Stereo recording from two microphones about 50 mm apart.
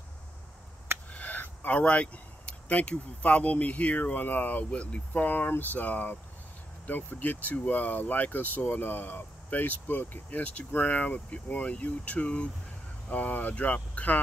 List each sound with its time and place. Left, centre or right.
1.1 s speech: left